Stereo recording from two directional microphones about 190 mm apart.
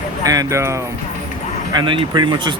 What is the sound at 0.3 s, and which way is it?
Speech, 15° right (ahead or behind).